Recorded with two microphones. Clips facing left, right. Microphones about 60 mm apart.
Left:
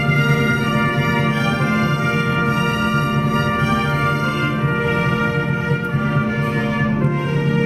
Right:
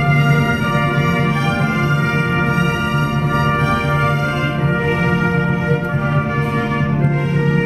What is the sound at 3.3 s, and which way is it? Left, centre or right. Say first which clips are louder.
Music: right 2 dB; right.